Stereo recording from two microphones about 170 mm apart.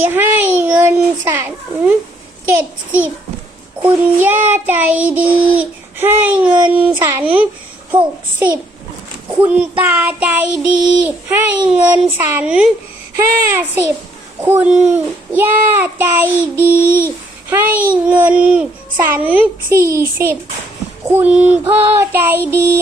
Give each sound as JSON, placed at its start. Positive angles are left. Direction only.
{"t": 0.0, "sound": "a child's voice", "side_deg": -10}
{"t": 2.5, "sound": "child singing", "side_deg": -10}
{"t": 7.9, "sound": "a child's voice", "side_deg": -25}
{"t": 9.4, "sound": "child singing", "side_deg": -10}